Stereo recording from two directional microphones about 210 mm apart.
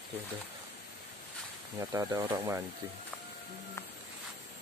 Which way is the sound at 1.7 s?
15° right (ahead or behind).